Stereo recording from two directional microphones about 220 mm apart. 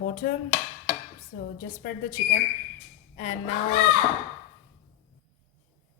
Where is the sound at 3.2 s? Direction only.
30° left (ahead or behind).